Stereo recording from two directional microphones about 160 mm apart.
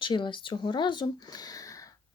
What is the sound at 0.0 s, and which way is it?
Speech, 30° left (ahead or behind).